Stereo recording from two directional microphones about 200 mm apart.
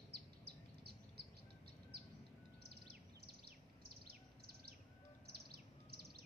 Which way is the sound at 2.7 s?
50° right (ahead or behind).